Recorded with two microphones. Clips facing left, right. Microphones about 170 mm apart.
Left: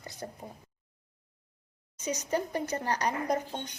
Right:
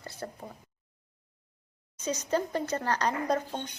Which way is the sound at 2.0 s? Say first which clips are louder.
Right 2 dB; 15° left (ahead or behind).